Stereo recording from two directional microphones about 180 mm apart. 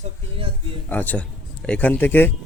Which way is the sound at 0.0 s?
30° right (ahead or behind).